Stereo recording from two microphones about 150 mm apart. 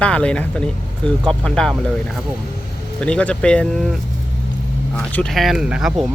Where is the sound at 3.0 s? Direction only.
10° left (ahead or behind).